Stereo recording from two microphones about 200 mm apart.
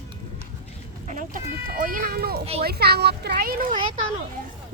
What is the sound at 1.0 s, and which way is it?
Speech, 40° right (ahead or behind).